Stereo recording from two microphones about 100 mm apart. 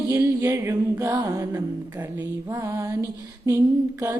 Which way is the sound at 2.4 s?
35° right (ahead or behind).